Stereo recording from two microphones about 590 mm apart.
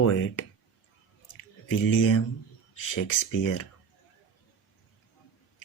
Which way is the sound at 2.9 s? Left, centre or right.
Left.